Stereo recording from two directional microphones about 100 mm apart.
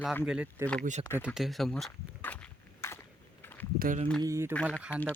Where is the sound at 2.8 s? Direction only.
25° left (ahead or behind).